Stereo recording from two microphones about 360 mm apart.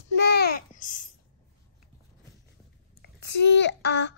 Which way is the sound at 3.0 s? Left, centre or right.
Left.